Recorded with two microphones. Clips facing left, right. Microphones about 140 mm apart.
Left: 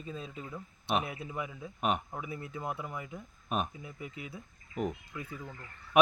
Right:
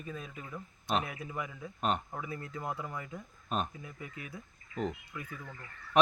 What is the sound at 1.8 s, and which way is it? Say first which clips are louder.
A man's voice: left 1 dB; 10° left (ahead or behind).